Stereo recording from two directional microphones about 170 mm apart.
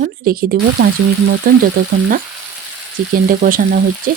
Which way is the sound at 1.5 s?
55° right (ahead or behind).